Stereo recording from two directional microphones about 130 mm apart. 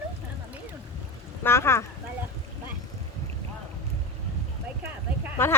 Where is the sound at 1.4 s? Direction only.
20° left (ahead or behind).